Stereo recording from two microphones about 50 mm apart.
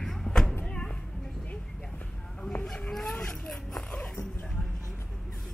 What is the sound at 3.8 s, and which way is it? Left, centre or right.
Dog, left.